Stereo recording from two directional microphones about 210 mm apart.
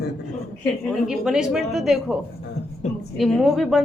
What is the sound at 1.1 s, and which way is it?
A man's voice, centre (ahead or behind).